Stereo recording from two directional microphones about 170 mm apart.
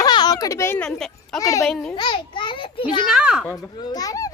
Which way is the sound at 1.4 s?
20° left (ahead or behind).